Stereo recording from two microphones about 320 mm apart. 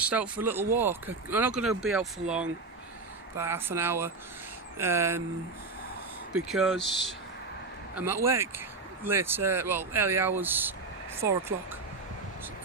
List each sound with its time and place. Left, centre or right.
0.0 s speech: centre
6.3 s speech: centre
6.9 s speech: left
7.9 s speech: centre